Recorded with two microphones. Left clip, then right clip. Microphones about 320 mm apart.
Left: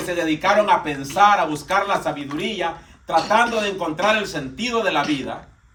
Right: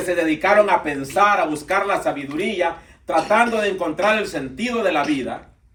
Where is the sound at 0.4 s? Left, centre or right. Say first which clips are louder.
Right 1 dB; centre.